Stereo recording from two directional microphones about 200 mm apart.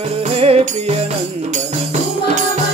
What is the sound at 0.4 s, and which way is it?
Music, 30° right (ahead or behind).